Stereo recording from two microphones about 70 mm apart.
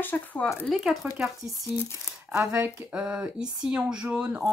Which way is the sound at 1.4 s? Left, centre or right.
Right.